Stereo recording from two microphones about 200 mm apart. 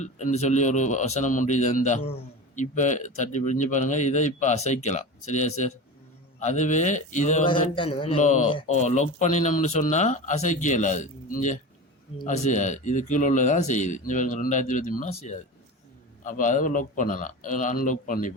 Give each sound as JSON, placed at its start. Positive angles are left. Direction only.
{"t": 0.0, "sound": "a man's voice", "side_deg": 35}